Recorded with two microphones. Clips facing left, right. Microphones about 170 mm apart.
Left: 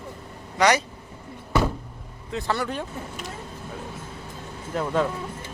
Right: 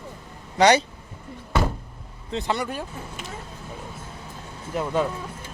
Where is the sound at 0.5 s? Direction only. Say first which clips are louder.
Right 3 dB; 30° right (ahead or behind).